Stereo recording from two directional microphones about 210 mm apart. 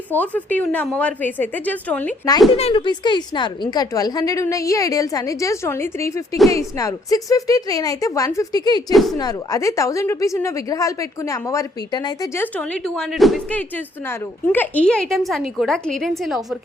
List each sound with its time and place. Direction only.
0.1 s a woman's voice: 5° left (ahead or behind)
2.6 s a woman's voice: 25° left (ahead or behind)
8.9 s speech: centre (ahead or behind)
9.1 s a woman's voice: 15° left (ahead or behind); by 16.6 s centre (ahead or behind)